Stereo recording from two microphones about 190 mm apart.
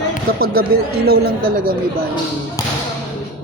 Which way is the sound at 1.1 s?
50° right (ahead or behind).